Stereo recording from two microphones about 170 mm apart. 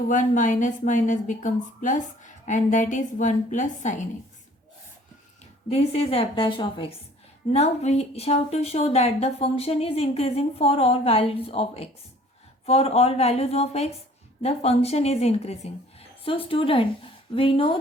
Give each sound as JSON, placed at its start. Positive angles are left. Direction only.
{"t": 0.1, "sound": "a woman's voice", "side_deg": 45}
{"t": 5.6, "sound": "speech", "side_deg": 35}
{"t": 7.5, "sound": "speech", "side_deg": 40}